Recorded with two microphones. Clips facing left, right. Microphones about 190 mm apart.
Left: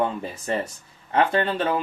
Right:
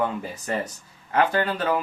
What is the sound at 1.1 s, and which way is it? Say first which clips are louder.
Speech: left 1 dB; 30° left (ahead or behind).